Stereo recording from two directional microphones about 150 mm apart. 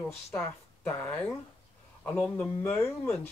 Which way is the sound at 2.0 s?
15° left (ahead or behind).